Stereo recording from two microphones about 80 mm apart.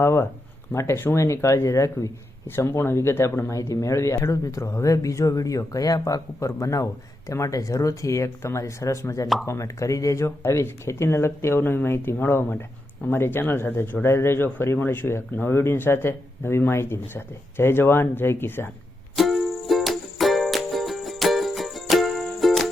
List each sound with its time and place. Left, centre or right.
0.0 s speech: left
19.1 s music: centre